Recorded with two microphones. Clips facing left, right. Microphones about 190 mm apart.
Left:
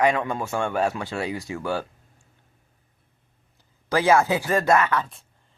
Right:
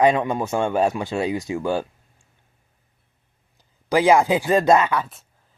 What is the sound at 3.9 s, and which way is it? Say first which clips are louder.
Speech: right 3 dB; 15° right (ahead or behind).